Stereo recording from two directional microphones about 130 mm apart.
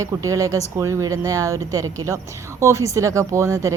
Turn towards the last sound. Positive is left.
turn(degrees=-25)  # may be behind; listen again after turning